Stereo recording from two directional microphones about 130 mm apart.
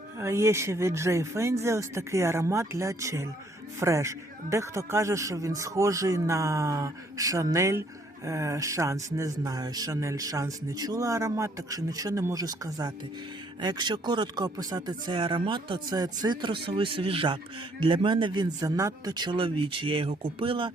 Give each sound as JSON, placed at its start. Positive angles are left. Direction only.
{"t": 0.2, "sound": "speech", "side_deg": -20}